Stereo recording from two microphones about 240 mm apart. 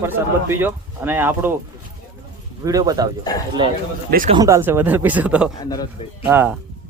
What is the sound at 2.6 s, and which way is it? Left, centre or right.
Speech, centre.